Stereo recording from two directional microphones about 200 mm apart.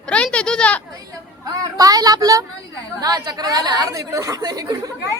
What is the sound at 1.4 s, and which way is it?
Speech, 20° right (ahead or behind).